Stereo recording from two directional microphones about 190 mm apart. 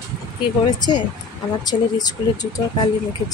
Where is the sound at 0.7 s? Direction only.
20° left (ahead or behind).